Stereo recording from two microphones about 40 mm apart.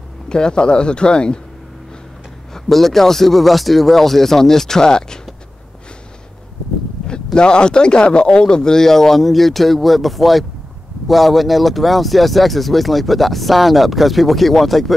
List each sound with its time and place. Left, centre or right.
0.3 s speech: left
2.5 s speech: centre
7.3 s speech: left; by 15.0 s centre